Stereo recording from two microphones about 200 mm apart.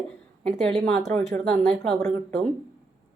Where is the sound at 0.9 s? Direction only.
5° left (ahead or behind).